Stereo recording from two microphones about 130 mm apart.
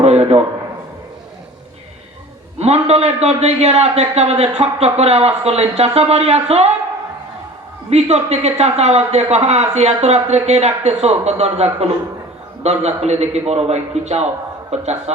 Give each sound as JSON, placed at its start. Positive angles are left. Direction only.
{"t": 0.0, "sound": "a sound", "side_deg": -55}
{"t": 2.6, "sound": "a man's voice", "side_deg": -55}
{"t": 7.9, "sound": "a man's voice", "side_deg": -55}